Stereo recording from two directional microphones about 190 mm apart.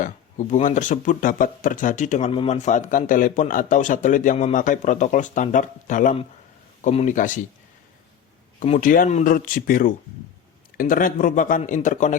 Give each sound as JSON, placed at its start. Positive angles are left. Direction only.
{"t": 0.0, "sound": "speech", "side_deg": 40}
{"t": 8.5, "sound": "speech", "side_deg": 40}